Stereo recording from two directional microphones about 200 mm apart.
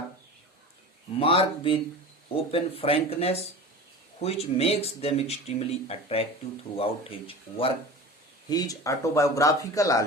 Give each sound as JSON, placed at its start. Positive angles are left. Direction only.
{"t": 1.2, "sound": "speech", "side_deg": 30}